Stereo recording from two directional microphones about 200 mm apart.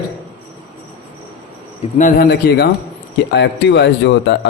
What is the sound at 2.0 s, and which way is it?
A man's voice, 50° left (ahead or behind).